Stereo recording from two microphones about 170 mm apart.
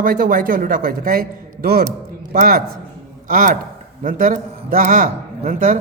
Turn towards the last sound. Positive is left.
turn(degrees=-50)  # may be behind; listen again after turning